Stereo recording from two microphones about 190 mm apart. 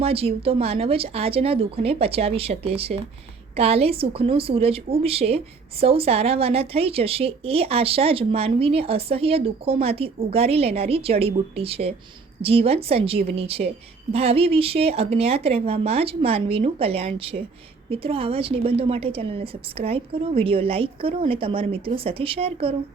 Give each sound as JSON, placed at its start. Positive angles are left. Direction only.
{"t": 0.0, "sound": "a woman's voice", "side_deg": -30}